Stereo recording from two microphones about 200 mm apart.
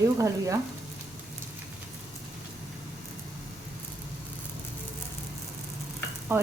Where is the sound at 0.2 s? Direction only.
15° right (ahead or behind).